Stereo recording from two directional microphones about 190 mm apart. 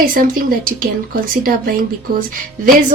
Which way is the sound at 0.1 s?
45° right (ahead or behind).